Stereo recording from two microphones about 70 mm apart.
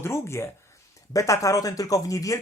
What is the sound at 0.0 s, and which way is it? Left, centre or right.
Speech, left.